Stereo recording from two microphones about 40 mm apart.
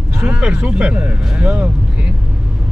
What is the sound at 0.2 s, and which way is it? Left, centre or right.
Speech, right.